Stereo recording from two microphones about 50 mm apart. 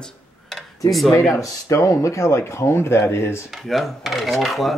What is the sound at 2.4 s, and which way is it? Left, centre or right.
Speech, left.